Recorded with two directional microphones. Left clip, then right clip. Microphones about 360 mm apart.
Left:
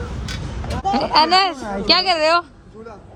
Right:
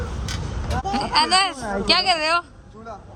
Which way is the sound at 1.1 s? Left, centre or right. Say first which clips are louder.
Left 3 dB; centre.